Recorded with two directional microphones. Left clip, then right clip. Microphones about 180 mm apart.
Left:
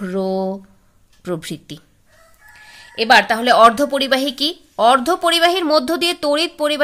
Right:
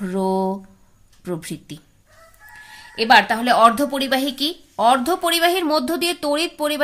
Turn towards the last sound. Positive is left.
turn(degrees=20)  # may be behind; listen again after turning